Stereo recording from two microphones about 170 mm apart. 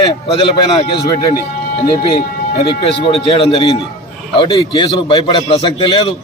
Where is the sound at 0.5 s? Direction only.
25° left (ahead or behind).